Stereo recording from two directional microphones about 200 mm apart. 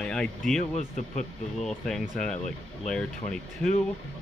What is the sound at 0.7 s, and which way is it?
Speech, 35° left (ahead or behind).